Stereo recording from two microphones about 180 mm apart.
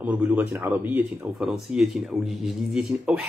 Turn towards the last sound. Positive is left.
turn(degrees=-5)  # may be behind; listen again after turning